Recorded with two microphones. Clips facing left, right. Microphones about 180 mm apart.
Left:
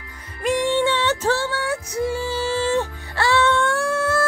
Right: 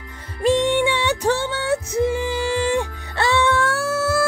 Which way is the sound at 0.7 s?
15° right (ahead or behind).